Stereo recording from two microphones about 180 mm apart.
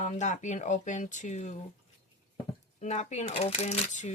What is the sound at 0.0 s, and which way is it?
Speech, 40° left (ahead or behind).